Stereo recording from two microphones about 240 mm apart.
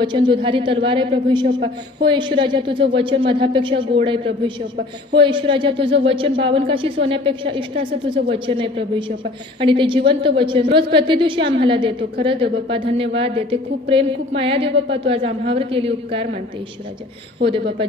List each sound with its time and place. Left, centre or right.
0.0 s a woman's voice: centre